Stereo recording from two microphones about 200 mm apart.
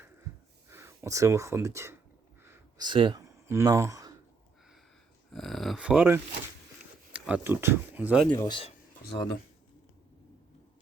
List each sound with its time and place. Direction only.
0.7 s speech: 15° right (ahead or behind)
2.4 s a sound: 15° right (ahead or behind)
5.3 s speech: centre (ahead or behind)
8.3 s speech: 20° left (ahead or behind)